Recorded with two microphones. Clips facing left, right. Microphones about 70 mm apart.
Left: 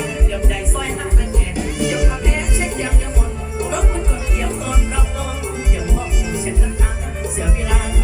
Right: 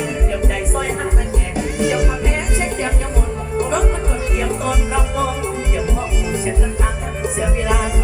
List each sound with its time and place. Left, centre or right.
1.8 s music: right